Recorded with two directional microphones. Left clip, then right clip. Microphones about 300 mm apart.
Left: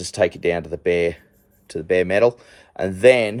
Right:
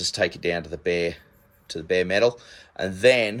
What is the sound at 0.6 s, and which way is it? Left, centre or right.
Speech, left.